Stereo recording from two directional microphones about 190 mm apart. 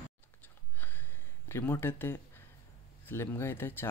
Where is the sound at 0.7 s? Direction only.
10° left (ahead or behind).